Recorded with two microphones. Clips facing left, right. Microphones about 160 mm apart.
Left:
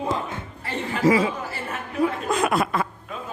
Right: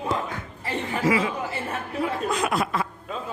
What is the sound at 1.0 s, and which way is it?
Speech, 35° left (ahead or behind).